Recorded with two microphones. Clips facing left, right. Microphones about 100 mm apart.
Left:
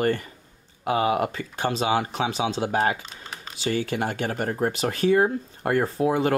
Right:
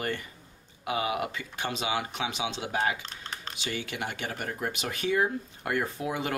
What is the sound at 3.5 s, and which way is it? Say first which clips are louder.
Speech: left 11 dB; 35° left (ahead or behind).